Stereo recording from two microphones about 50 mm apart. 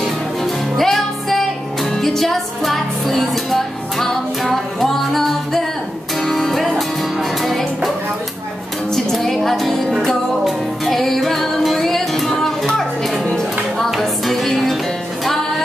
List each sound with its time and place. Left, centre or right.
0.0 s music: centre
8.9 s music: centre